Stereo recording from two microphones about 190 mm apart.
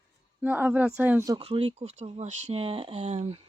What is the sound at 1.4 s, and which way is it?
Speech, 30° right (ahead or behind).